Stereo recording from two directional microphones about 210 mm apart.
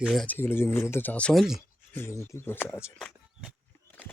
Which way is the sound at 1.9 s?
10° left (ahead or behind).